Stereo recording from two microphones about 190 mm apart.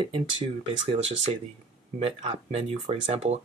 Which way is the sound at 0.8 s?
30° right (ahead or behind).